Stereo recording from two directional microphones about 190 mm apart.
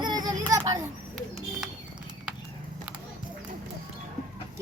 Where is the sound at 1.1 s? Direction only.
Centre (ahead or behind).